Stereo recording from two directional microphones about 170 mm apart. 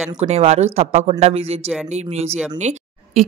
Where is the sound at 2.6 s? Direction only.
45° right (ahead or behind).